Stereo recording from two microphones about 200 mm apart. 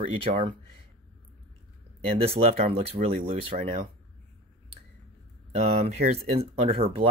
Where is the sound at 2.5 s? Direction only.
30° right (ahead or behind).